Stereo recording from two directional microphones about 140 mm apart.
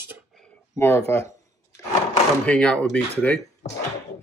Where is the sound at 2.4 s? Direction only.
10° left (ahead or behind).